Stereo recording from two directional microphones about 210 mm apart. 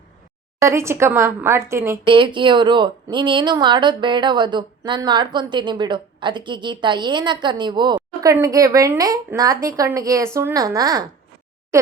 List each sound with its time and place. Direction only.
0.6 s a woman's voice: 15° right (ahead or behind)
2.0 s speech: 25° right (ahead or behind)